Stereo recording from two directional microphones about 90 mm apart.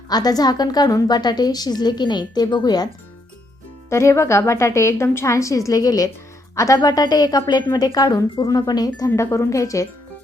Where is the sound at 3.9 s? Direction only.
30° left (ahead or behind).